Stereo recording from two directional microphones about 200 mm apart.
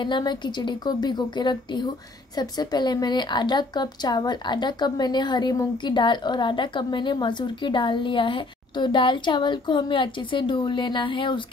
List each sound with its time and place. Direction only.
0.0 s a woman's voice: 20° left (ahead or behind)